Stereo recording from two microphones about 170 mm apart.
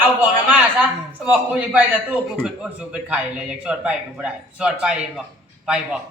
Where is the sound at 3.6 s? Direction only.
5° right (ahead or behind).